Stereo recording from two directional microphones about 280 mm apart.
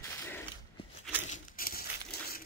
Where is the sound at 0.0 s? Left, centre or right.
Centre.